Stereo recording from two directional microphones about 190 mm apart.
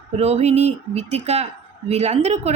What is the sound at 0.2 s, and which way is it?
A woman's voice, 35° right (ahead or behind).